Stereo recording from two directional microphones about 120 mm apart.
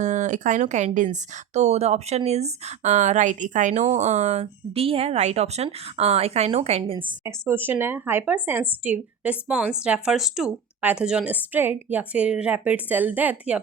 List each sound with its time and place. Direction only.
0.0 s speech: 90° right
3.9 s speech: 70° right (ahead or behind); by 7.1 s 50° right (ahead or behind)
7.3 s speech: 20° right (ahead or behind)